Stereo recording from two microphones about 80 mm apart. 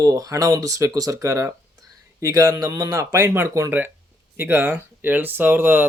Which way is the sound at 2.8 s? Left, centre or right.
Right.